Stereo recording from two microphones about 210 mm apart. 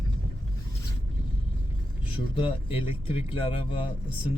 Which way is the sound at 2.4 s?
25° left (ahead or behind).